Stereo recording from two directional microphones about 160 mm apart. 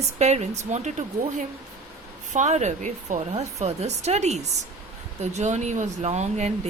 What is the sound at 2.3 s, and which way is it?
A woman's voice, 45° right (ahead or behind).